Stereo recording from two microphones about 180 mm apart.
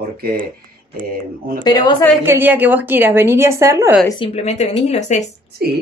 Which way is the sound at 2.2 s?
10° right (ahead or behind).